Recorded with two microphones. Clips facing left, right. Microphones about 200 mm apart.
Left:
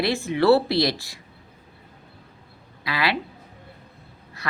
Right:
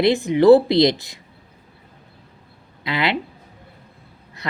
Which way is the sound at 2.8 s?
20° right (ahead or behind).